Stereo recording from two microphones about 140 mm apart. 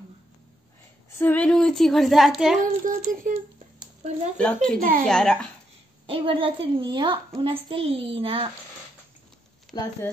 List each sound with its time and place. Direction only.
1.1 s a woman's voice: 10° left (ahead or behind)
2.6 s speech: 65° right (ahead or behind)
4.4 s a woman's voice: 5° left (ahead or behind)
6.0 s a child's voice: 40° right (ahead or behind)
9.7 s speech: centre (ahead or behind)